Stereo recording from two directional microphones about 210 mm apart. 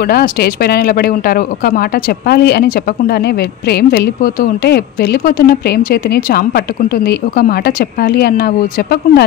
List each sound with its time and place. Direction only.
0.0 s speech: 45° left (ahead or behind)